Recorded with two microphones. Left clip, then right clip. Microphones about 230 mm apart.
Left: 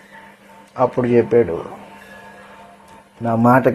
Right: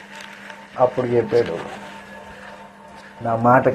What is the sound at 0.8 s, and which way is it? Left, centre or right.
Speech, left.